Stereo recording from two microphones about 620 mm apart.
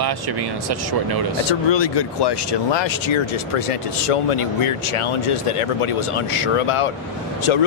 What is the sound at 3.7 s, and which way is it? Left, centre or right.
Speech, left.